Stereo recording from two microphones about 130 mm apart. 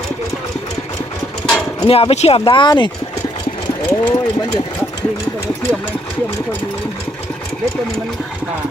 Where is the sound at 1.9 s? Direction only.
50° left (ahead or behind).